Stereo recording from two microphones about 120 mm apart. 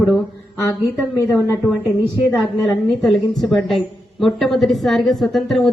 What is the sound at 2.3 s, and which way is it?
A woman's voice, centre (ahead or behind).